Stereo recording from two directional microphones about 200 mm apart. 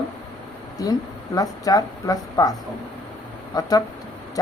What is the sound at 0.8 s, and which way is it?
A woman's voice, 20° left (ahead or behind).